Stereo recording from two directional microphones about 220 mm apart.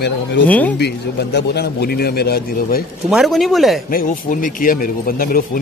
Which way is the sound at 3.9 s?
40° left (ahead or behind).